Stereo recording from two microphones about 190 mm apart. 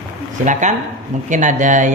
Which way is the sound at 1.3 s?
40° right (ahead or behind).